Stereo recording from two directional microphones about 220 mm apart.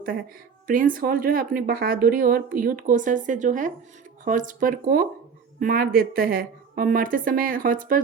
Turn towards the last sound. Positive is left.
turn(degrees=-40)  # may be behind; listen again after turning